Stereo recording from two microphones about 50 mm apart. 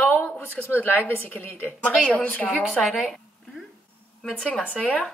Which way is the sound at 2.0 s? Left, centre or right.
Left.